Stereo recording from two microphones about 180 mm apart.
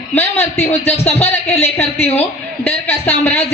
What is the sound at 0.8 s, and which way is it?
Speech, 35° left (ahead or behind).